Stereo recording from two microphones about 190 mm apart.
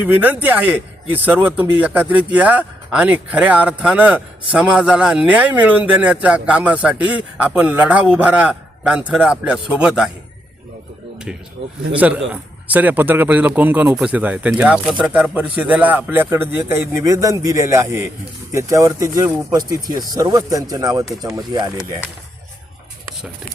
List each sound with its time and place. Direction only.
0.0 s a man's voice: 10° right (ahead or behind)
11.6 s a man's voice: 35° right (ahead or behind)
11.9 s speech: 5° right (ahead or behind)